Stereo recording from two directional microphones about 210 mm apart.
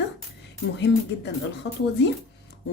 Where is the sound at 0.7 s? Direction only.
55° left (ahead or behind).